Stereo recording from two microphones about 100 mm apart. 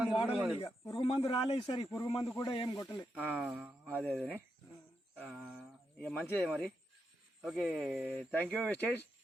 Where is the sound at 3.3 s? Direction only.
5° right (ahead or behind).